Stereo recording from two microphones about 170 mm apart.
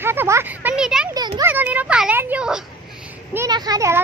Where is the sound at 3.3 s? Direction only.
20° right (ahead or behind).